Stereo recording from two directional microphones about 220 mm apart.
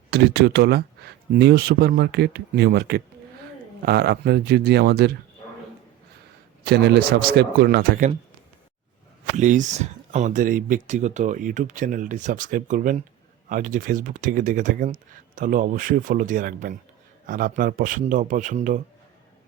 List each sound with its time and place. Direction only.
0.1 s speech: 50° right (ahead or behind)
6.7 s speech: 45° right (ahead or behind)
9.3 s speech: 35° right (ahead or behind)